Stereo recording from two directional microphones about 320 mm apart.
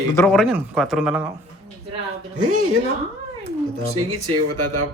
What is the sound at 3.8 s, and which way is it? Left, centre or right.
Speech, right.